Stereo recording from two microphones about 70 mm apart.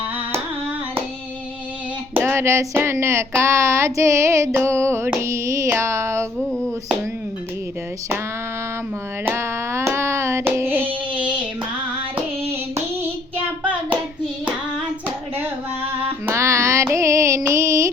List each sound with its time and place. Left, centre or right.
2.1 s speech: right
6.4 s a sound: centre
9.2 s hands: right
16.3 s music: right